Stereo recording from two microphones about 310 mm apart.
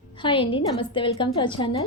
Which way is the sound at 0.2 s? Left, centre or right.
Centre.